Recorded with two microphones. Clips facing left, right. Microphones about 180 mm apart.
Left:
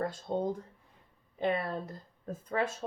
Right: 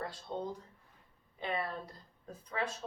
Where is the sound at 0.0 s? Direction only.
45° left (ahead or behind).